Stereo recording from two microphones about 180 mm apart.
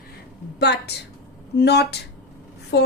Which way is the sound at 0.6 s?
65° left (ahead or behind).